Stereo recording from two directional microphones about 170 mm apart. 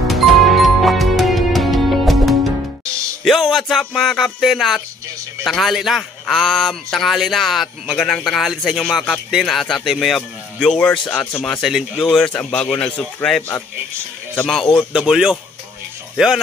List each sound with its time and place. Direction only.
0.1 s music: centre (ahead or behind)
3.3 s a man's voice: centre (ahead or behind)